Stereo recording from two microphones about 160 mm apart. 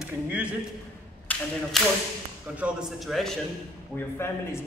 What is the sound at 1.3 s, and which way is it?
Tap, 10° left (ahead or behind).